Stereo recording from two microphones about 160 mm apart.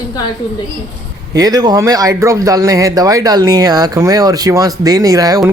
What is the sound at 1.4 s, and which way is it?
Speech, 25° right (ahead or behind).